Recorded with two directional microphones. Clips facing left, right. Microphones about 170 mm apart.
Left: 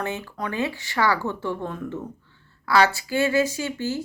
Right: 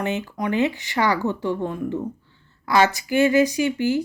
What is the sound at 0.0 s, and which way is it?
Speech, 20° right (ahead or behind).